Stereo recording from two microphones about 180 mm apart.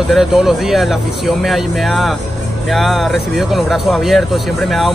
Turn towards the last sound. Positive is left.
turn(degrees=0)  # may be behind; listen again after turning